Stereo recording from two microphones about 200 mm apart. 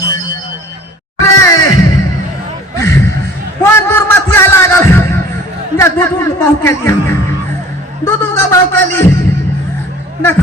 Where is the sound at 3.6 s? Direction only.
10° left (ahead or behind).